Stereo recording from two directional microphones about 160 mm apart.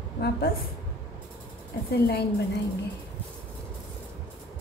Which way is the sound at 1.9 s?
85° left.